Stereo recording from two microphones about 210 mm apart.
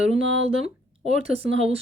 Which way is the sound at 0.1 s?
30° right (ahead or behind).